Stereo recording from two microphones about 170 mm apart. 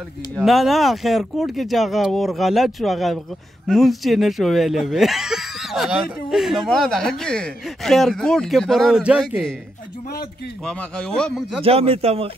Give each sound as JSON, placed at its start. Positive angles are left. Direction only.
{"t": 0.4, "sound": "speech", "side_deg": 0}
{"t": 10.6, "sound": "speech", "side_deg": 5}
{"t": 11.6, "sound": "speech", "side_deg": -35}